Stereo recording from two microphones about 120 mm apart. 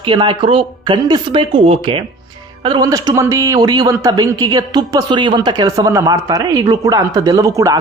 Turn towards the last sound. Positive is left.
turn(degrees=-25)  # may be behind; listen again after turning